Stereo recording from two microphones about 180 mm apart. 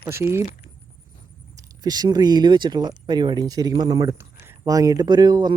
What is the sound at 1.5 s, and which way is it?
Speech, 20° right (ahead or behind).